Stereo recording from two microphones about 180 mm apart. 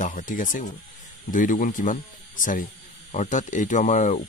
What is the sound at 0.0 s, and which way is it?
Speech, 45° left (ahead or behind).